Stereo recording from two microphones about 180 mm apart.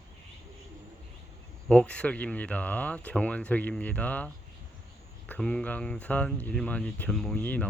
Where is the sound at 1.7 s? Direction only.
5° left (ahead or behind).